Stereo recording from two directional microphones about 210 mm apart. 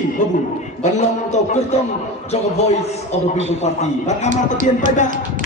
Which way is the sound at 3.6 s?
30° left (ahead or behind).